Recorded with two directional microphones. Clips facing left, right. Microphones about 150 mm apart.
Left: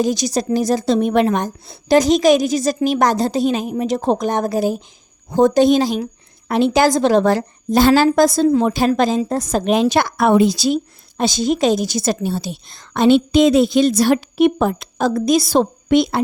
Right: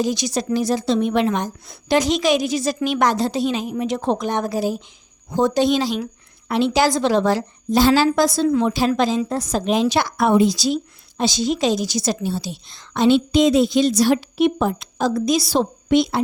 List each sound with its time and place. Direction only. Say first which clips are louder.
0.0 s a woman's voice: left 3 dB; 45° left (ahead or behind)
1.6 s a woman's voice: left 6 dB; 35° left (ahead or behind); by 16.2 s 55° left (ahead or behind)